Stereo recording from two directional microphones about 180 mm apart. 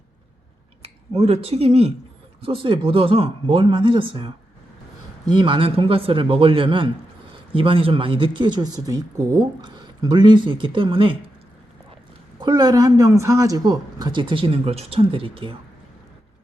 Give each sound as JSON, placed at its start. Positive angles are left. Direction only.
{"t": 0.8, "sound": "speech", "side_deg": -35}
{"t": 12.4, "sound": "speech", "side_deg": -25}